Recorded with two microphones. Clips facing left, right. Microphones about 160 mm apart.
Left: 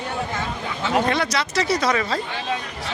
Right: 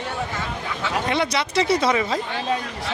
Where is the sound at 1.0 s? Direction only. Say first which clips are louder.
Even; 25° right (ahead or behind).